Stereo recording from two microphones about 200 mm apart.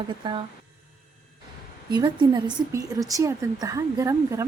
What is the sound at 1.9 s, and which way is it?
A woman's voice, 20° right (ahead or behind).